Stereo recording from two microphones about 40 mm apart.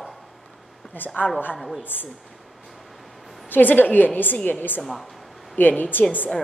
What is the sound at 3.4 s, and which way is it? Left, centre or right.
Speech, left.